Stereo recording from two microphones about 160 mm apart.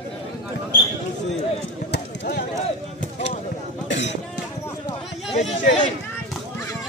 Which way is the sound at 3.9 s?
90° left.